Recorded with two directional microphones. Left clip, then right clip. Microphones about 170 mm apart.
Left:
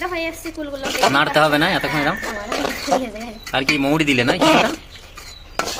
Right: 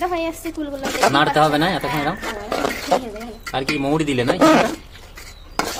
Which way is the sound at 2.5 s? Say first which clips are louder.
Right 1 dB; 20° right (ahead or behind).